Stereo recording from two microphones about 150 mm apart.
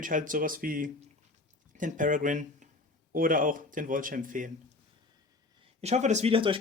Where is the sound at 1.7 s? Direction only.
60° right (ahead or behind).